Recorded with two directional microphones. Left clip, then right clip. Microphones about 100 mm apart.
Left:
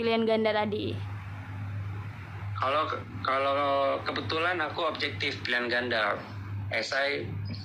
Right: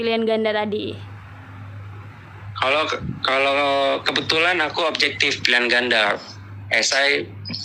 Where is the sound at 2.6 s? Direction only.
40° right (ahead or behind).